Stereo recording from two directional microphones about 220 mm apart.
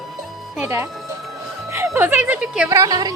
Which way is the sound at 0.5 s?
10° right (ahead or behind).